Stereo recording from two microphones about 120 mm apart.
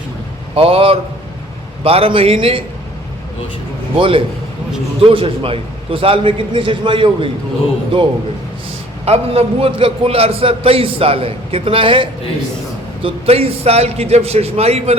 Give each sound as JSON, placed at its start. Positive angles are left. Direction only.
{"t": 0.5, "sound": "a man's voice", "side_deg": -50}
{"t": 3.9, "sound": "a man's voice", "side_deg": -45}
{"t": 9.0, "sound": "a man's voice", "side_deg": -55}